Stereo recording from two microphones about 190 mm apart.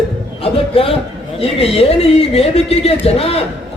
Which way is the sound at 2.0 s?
30° left (ahead or behind).